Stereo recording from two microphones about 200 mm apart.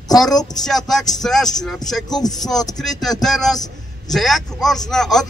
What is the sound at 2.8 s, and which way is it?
A man's voice, centre (ahead or behind).